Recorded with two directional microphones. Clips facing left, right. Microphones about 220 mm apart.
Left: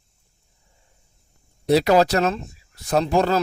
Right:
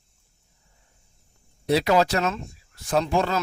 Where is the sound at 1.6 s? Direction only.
40° left (ahead or behind).